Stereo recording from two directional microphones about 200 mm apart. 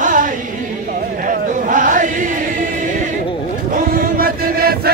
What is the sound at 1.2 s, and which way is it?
Chant, 40° right (ahead or behind).